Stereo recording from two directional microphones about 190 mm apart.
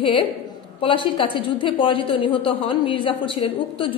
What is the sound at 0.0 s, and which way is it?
A woman's voice, 25° left (ahead or behind).